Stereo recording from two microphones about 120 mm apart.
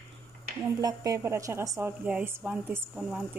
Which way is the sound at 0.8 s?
30° right (ahead or behind).